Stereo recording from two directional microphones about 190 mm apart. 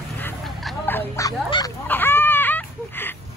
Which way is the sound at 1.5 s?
25° left (ahead or behind).